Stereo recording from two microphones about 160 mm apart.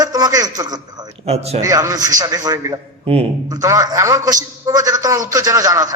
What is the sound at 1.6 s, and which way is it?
A man's voice, 20° right (ahead or behind).